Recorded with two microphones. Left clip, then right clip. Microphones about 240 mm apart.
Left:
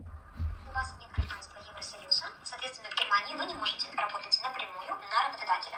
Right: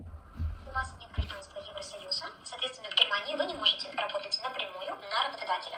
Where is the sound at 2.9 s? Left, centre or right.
Right.